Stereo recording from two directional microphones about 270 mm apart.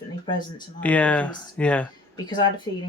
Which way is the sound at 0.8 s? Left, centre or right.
Centre.